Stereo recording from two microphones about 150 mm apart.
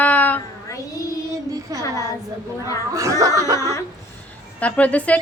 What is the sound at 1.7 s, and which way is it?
Speech, 25° right (ahead or behind).